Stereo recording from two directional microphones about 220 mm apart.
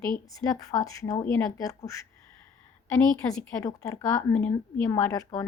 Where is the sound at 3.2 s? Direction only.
15° left (ahead or behind).